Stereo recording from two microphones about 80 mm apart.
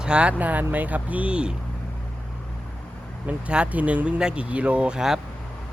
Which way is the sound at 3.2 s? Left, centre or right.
Centre.